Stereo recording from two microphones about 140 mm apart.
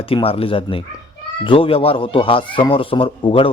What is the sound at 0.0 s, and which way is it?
A man's voice, 40° left (ahead or behind).